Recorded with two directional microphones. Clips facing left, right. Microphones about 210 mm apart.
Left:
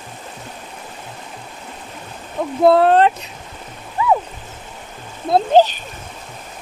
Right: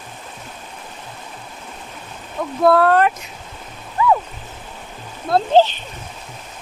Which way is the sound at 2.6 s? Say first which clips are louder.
Left 2 dB; 25° left (ahead or behind).